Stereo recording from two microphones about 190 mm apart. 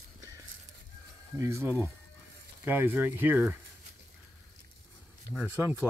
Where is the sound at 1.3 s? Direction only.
15° right (ahead or behind).